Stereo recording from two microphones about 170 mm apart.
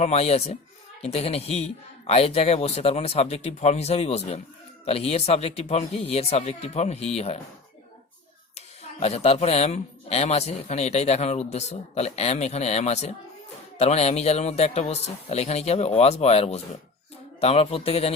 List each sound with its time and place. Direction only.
0.0 s speech: 40° left (ahead or behind)
8.5 s speech: 40° left (ahead or behind)